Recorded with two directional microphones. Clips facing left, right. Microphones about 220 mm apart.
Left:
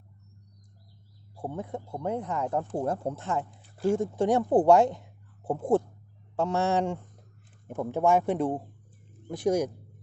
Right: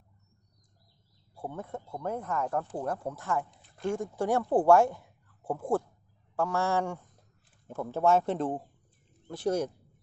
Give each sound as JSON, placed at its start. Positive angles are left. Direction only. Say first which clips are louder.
{"t": 1.4, "sound": "speech", "louder": "left 3 dB", "side_deg": 15}